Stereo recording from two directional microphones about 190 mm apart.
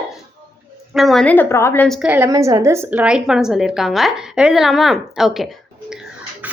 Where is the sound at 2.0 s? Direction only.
10° right (ahead or behind).